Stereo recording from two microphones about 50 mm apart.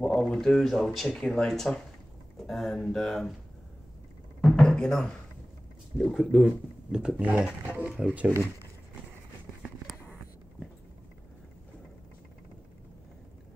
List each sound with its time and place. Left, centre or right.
0.0 s speech: centre
1.1 s speech: centre
4.4 s a sound: centre
5.9 s speech: centre
7.2 s speech: right